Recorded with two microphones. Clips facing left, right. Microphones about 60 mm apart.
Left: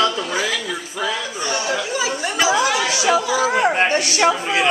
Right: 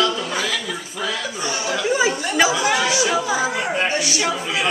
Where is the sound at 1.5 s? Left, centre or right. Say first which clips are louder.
Left 3 dB; left.